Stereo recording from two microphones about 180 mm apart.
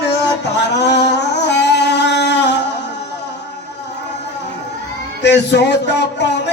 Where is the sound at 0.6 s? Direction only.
70° left (ahead or behind).